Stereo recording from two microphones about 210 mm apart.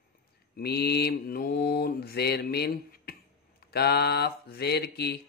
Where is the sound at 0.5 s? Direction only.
50° left (ahead or behind).